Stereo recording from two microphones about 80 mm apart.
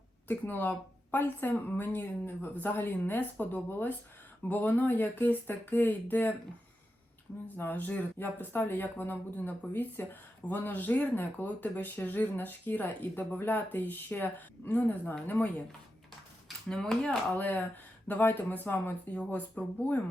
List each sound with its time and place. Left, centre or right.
0.3 s speech: left
7.4 s speech: left
16.6 s speech: centre
17.3 s speech: left